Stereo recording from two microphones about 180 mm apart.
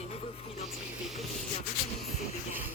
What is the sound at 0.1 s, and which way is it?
Music, 30° left (ahead or behind).